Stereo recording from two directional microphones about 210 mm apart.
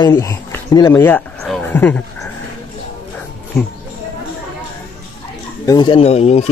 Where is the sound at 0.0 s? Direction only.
15° left (ahead or behind).